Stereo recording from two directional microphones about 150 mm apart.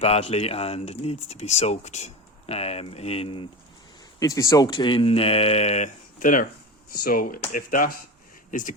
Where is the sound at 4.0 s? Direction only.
25° left (ahead or behind); by 6.5 s 65° left (ahead or behind).